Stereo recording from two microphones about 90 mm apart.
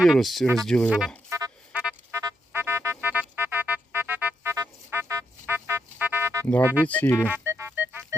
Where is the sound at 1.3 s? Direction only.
40° right (ahead or behind).